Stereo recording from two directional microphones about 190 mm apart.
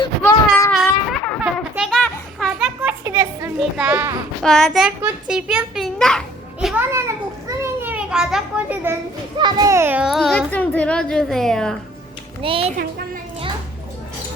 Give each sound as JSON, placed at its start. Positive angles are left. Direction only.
{"t": 0.2, "sound": "child singing", "side_deg": 15}
{"t": 0.7, "sound": "a sound", "side_deg": 0}
{"t": 1.7, "sound": "children playing", "side_deg": 0}
{"t": 3.6, "sound": "child singing", "side_deg": -5}
{"t": 4.5, "sound": "a child's voice", "side_deg": 0}
{"t": 7.5, "sound": "children playing", "side_deg": -15}
{"t": 9.4, "sound": "a child's voice", "side_deg": -20}
{"t": 12.4, "sound": "a child's voice", "side_deg": -30}